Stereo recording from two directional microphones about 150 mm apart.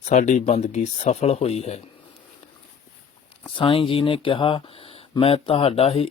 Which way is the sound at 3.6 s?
35° left (ahead or behind).